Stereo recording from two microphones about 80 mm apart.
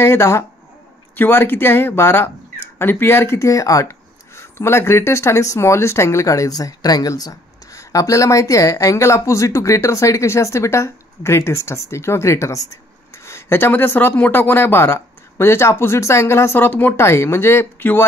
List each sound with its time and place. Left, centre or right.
0.0 s speech: left
4.4 s speech: left